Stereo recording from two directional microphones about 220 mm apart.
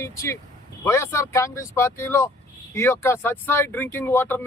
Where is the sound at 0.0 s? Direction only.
15° left (ahead or behind).